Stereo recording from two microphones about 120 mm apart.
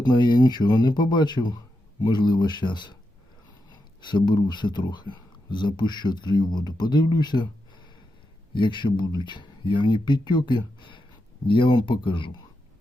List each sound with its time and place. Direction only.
0.0 s speech: 35° left (ahead or behind)